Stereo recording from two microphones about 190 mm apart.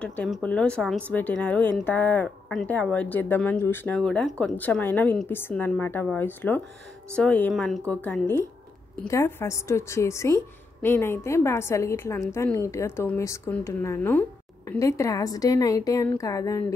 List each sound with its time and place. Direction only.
0.0 s a woman's voice: 5° left (ahead or behind)